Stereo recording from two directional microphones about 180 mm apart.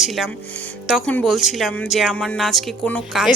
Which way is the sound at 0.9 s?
5° left (ahead or behind).